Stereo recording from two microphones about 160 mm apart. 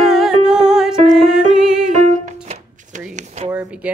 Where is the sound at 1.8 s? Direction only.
50° right (ahead or behind).